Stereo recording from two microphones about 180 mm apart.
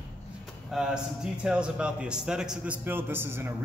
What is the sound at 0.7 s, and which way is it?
A man's voice, 5° right (ahead or behind).